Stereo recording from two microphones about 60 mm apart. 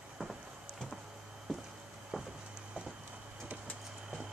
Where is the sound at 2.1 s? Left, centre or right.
Centre.